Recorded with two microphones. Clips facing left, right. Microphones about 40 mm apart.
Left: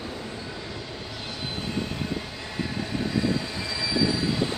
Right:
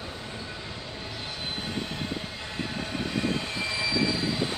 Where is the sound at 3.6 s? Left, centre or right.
Right.